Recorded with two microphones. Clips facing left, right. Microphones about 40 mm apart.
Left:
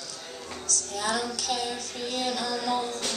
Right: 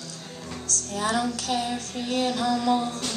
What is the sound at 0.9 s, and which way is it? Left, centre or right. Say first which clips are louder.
A woman's voice: right 4 dB; right.